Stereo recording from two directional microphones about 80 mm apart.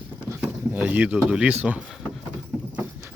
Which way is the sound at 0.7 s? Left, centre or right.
Centre.